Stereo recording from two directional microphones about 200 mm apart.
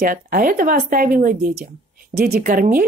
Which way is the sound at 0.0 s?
45° right (ahead or behind).